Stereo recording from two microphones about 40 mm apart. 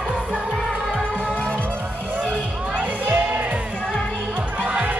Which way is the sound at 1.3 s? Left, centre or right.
Left.